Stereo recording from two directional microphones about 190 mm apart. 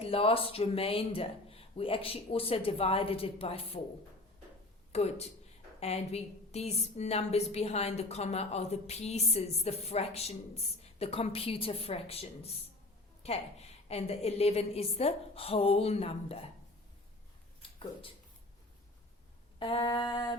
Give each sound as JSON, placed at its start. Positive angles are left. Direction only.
{"t": 0.0, "sound": "speech", "side_deg": 30}
{"t": 4.9, "sound": "a woman's voice", "side_deg": 35}
{"t": 19.5, "sound": "speech", "side_deg": 30}